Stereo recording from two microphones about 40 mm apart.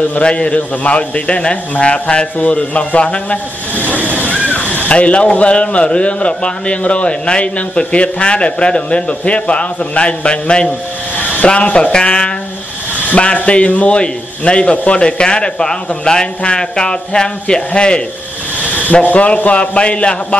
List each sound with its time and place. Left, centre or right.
0.2 s a man's voice: left
3.7 s a sound: left
4.1 s speech: left
19.0 s a man's voice: left